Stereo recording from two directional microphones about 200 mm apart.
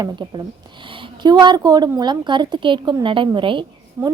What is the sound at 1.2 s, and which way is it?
A woman's voice, 20° right (ahead or behind).